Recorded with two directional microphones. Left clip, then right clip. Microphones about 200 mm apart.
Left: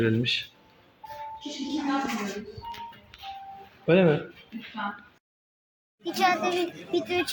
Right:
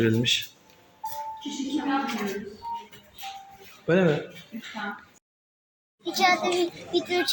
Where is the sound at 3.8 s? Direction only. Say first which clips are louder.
Left 1 dB; 15° left (ahead or behind).